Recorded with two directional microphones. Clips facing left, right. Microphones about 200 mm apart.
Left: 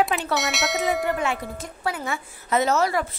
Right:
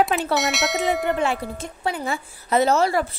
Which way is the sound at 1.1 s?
30° right (ahead or behind).